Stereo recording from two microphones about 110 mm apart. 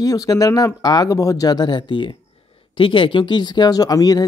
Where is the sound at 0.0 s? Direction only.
35° left (ahead or behind).